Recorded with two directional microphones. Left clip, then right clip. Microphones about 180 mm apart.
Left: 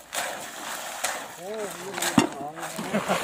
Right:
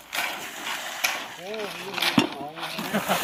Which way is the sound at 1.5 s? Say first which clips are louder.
Right 2 dB; 15° left (ahead or behind).